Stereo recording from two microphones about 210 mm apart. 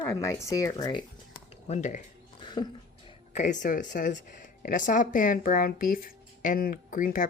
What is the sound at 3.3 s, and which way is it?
Speech, 35° left (ahead or behind).